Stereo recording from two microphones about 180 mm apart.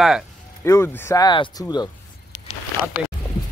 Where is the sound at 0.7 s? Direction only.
15° left (ahead or behind).